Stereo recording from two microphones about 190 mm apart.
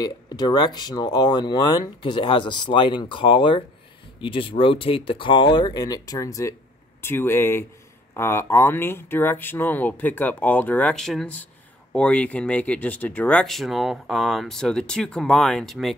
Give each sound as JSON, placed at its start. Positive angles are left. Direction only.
{"t": 0.0, "sound": "speech", "side_deg": 20}